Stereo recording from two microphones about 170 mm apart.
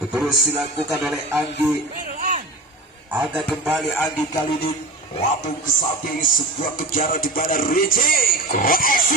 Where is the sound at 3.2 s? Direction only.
Centre (ahead or behind).